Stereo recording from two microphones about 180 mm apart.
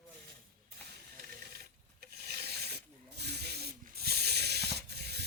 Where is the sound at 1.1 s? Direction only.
55° right (ahead or behind).